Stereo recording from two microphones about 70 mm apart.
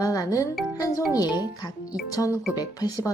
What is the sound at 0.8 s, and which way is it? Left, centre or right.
A woman's voice, left.